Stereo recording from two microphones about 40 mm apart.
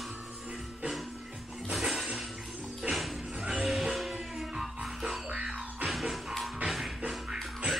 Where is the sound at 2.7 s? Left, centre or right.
Centre.